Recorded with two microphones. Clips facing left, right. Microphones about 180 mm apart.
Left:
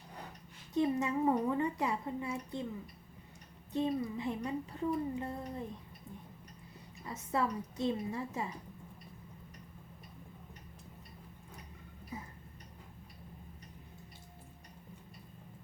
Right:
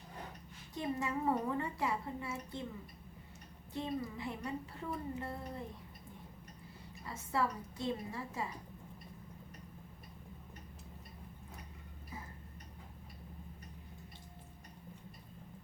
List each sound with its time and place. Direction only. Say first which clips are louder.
0.8 s a woman's voice: left 6 dB; 20° left (ahead or behind)
3.7 s a woman's voice: left 6 dB; 20° left (ahead or behind)
7.0 s a woman's voice: left 2 dB; 20° left (ahead or behind)